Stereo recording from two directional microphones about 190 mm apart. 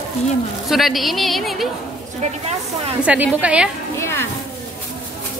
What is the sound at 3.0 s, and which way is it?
Speech, 5° right (ahead or behind).